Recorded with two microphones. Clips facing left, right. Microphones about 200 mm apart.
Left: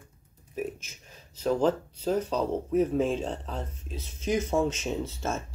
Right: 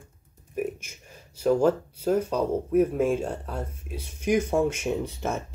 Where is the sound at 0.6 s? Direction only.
10° right (ahead or behind).